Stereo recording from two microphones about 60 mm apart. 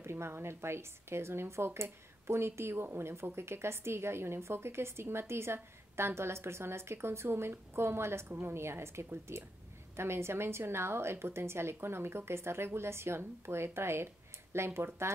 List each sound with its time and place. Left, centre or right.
0.0 s a woman's voice: right